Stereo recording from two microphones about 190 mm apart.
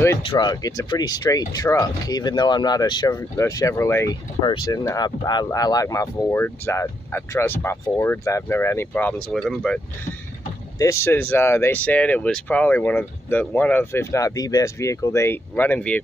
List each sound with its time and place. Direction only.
0.2 s speech: 25° left (ahead or behind); by 9.8 s 5° left (ahead or behind)
10.8 s speech: 15° left (ahead or behind)